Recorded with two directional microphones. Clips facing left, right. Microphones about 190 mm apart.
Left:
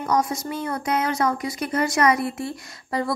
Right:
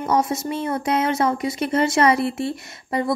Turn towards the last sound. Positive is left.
turn(degrees=-25)  # may be behind; listen again after turning